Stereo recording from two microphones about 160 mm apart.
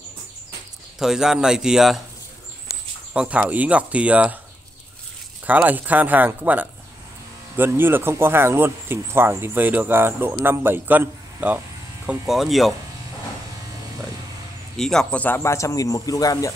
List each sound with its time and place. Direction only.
0.9 s speech: 5° right (ahead or behind)
3.1 s speech: 5° right (ahead or behind)
5.5 s speech: 10° right (ahead or behind)
14.8 s a man's voice: 5° left (ahead or behind); by 16.5 s 20° left (ahead or behind)